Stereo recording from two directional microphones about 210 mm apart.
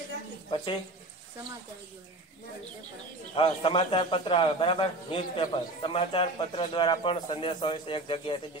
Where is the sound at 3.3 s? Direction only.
25° left (ahead or behind).